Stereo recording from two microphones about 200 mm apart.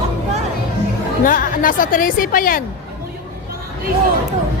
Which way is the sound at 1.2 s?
45° left (ahead or behind).